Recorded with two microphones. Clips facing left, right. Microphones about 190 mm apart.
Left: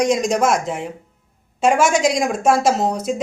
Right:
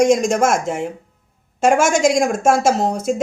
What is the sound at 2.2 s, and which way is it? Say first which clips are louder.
Speech: right 1 dB; 45° right (ahead or behind).